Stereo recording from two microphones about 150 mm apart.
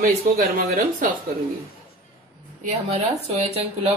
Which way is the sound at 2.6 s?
45° right (ahead or behind).